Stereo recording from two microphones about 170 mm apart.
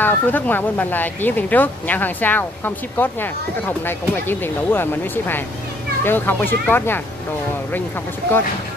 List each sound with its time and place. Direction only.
0.0 s speech: 10° left (ahead or behind)
8.2 s speech: 70° right (ahead or behind)